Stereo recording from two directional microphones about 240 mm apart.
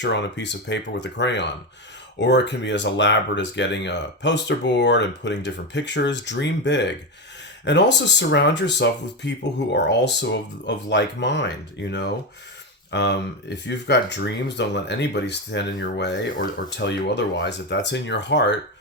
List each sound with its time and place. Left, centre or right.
0.0 s speech: left